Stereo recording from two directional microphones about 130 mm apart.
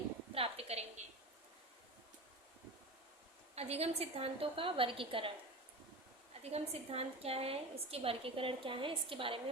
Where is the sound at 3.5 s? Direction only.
55° right (ahead or behind).